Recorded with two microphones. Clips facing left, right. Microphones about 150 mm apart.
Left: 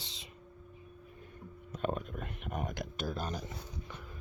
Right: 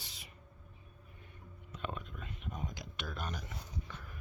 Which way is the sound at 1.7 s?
45° left (ahead or behind).